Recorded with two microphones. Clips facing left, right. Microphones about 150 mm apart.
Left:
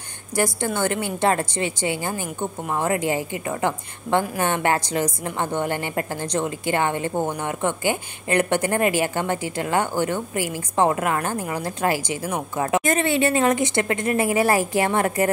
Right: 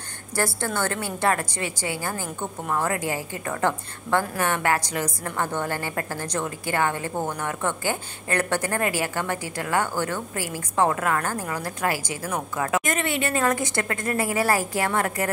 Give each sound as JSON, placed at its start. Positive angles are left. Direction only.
{"t": 0.4, "sound": "a woman's voice", "side_deg": 15}